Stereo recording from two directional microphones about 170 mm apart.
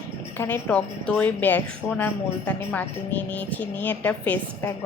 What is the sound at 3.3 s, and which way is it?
A woman's voice, 10° left (ahead or behind).